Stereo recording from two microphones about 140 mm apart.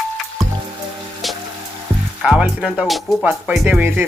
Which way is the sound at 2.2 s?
5° right (ahead or behind).